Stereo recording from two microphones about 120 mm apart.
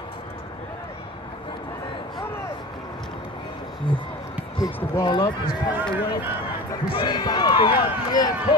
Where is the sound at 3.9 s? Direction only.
40° left (ahead or behind).